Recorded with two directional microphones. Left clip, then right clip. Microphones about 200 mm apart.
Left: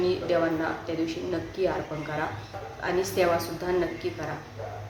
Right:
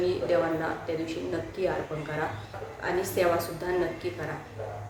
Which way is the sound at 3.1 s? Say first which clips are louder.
Even; 10° left (ahead or behind).